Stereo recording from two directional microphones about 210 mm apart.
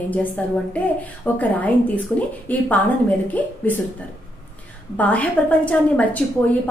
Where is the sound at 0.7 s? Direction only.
5° left (ahead or behind).